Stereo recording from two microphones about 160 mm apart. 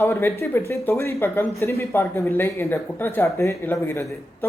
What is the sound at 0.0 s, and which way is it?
Speech, 15° left (ahead or behind).